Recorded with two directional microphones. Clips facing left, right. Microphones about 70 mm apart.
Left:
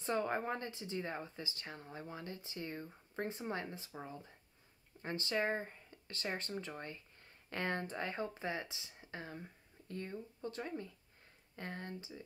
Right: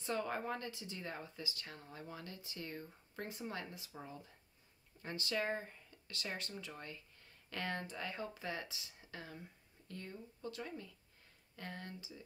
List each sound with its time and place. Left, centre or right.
0.0 s speech: left
5.0 s speech: left